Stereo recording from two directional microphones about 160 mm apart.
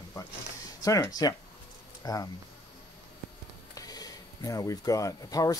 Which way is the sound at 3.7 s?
25° left (ahead or behind).